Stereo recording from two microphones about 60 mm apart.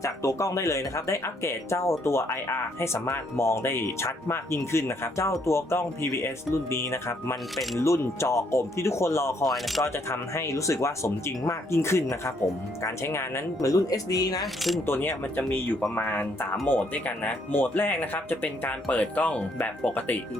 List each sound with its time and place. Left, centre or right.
0.0 s speech: left
7.5 s speech: centre
7.8 s speech: left
9.4 s speech: centre
9.8 s speech: left
13.6 s speech: left
14.4 s speech: centre
14.8 s speech: left
15.4 s speech: left
19.9 s speech: left